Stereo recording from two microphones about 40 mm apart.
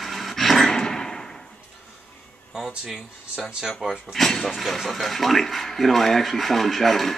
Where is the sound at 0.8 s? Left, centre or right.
Centre.